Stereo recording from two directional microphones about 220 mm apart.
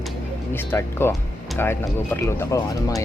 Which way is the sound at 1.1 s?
10° left (ahead or behind).